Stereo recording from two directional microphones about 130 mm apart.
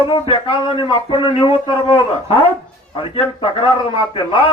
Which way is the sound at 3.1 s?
40° left (ahead or behind).